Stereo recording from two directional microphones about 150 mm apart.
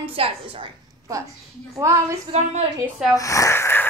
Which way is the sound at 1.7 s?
20° right (ahead or behind).